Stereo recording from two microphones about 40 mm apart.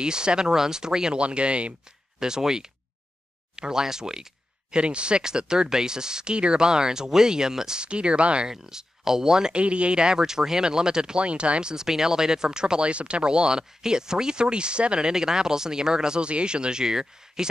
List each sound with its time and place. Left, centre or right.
0.0 s speech: right
1.2 s speech: right
2.1 s speech: centre
8.5 s speech: centre
9.6 s speech: right
11.2 s speech: right
11.7 s speech: centre